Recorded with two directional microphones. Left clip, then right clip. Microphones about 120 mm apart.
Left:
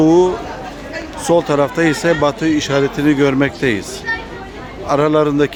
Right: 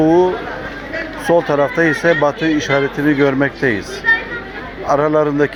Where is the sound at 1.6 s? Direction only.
45° left (ahead or behind).